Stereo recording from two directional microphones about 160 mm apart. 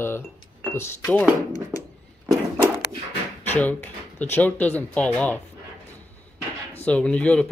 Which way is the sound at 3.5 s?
10° left (ahead or behind).